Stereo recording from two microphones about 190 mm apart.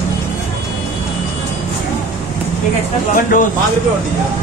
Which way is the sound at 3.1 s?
45° left (ahead or behind).